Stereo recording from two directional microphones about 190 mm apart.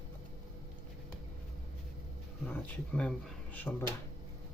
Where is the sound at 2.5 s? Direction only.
5° left (ahead or behind).